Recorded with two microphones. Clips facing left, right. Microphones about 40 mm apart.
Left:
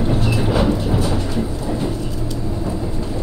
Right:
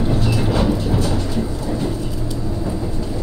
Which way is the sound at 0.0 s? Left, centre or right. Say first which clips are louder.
Even; centre.